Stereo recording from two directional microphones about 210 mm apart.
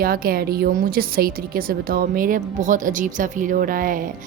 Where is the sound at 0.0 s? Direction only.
45° right (ahead or behind).